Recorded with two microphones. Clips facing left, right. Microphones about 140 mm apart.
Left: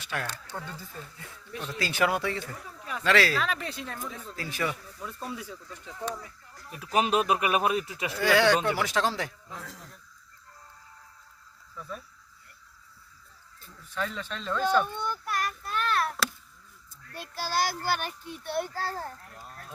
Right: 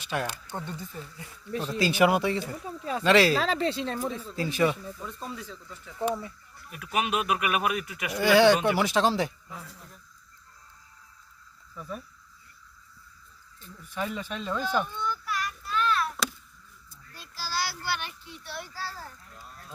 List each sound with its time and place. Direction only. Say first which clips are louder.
0.1 s speech: right 4 dB; 20° right (ahead or behind)
1.5 s speech: right 6 dB; 35° right (ahead or behind)
1.8 s speech: right 4 dB; 15° right (ahead or behind)
3.3 s speech: right 5 dB; 30° right (ahead or behind)
5.0 s speech: left 4 dB; 10° left (ahead or behind)
6.7 s speech: left 3 dB; 35° left (ahead or behind)
8.1 s speech: right 3 dB; 15° right (ahead or behind)
11.8 s speech: right 2 dB; 10° right (ahead or behind)
13.9 s speech: right 1 dB; 15° right (ahead or behind)
14.8 s a sound: even; 55° left (ahead or behind)
17.1 s a child's voice: left 4 dB; 60° left (ahead or behind)